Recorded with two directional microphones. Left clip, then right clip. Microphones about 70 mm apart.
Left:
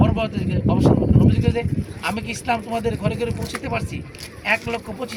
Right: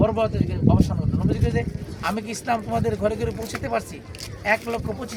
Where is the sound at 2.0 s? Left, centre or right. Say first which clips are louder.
Left 1 dB; right.